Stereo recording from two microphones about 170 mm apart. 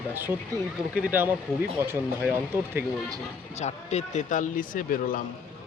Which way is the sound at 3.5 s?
40° left (ahead or behind).